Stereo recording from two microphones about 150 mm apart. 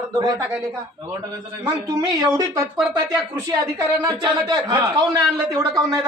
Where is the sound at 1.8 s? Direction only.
25° right (ahead or behind).